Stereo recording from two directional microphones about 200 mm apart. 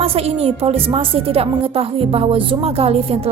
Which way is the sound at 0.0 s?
30° right (ahead or behind).